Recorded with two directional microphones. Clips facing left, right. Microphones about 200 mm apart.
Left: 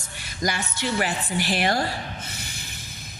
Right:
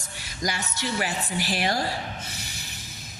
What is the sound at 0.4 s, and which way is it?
Speech, 55° left (ahead or behind).